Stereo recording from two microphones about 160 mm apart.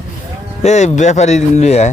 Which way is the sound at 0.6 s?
45° left (ahead or behind).